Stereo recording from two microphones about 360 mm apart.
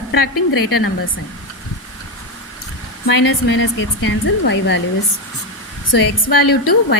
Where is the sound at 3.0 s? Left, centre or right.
Left.